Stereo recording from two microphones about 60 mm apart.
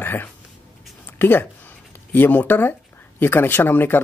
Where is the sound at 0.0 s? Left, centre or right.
Left.